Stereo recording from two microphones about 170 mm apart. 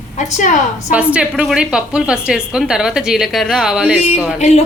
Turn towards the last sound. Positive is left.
turn(degrees=40)  # may be behind; listen again after turning